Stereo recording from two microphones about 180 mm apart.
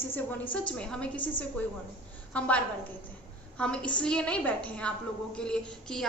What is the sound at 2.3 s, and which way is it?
A woman's voice, 5° left (ahead or behind).